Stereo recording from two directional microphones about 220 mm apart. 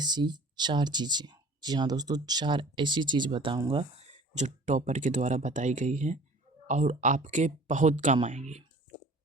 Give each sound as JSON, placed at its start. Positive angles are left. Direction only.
{"t": 0.0, "sound": "speech", "side_deg": -20}
{"t": 4.4, "sound": "speech", "side_deg": -35}